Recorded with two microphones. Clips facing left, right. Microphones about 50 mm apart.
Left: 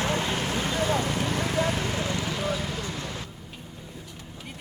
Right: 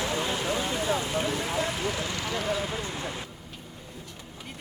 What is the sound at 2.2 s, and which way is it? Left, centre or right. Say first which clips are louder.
Vehicle: even; centre.